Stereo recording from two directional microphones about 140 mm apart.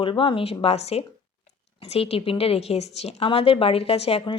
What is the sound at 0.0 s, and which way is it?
Speech, 40° left (ahead or behind).